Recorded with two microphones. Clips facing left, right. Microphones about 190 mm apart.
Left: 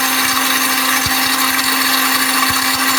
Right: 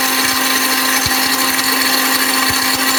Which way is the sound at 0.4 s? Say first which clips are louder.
Right 1 dB; 25° right (ahead or behind).